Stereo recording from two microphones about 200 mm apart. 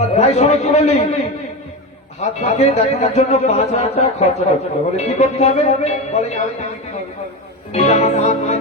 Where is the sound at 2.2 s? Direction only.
35° left (ahead or behind).